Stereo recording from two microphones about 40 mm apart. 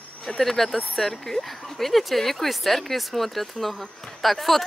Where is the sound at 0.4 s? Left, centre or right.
Centre.